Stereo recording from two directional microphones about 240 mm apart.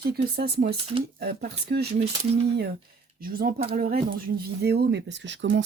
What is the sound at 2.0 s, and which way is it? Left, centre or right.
Speech, right.